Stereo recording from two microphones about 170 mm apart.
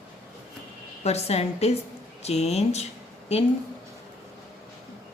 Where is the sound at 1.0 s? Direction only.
40° left (ahead or behind).